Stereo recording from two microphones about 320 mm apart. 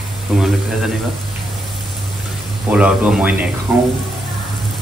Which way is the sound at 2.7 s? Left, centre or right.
Centre.